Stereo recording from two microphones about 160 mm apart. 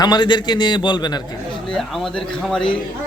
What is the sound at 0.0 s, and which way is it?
A man's voice, 30° left (ahead or behind).